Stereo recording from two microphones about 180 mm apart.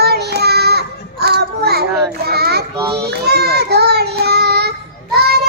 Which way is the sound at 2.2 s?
60° right (ahead or behind).